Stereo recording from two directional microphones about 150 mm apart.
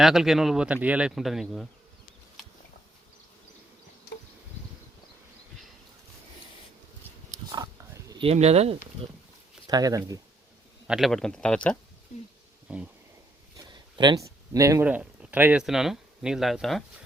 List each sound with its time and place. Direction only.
0.0 s speech: centre (ahead or behind)
7.5 s pig: 25° right (ahead or behind)
8.2 s speech: 45° right (ahead or behind)
9.6 s speech: 25° right (ahead or behind)
10.8 s speech: centre (ahead or behind)
12.6 s a sound: 5° right (ahead or behind)
13.7 s a sound: 30° right (ahead or behind)
14.8 s speech: 10° right (ahead or behind)